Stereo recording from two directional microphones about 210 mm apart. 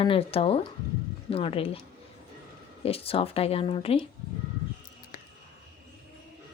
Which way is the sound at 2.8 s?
25° left (ahead or behind).